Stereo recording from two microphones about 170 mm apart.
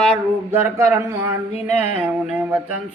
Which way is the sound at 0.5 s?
15° right (ahead or behind).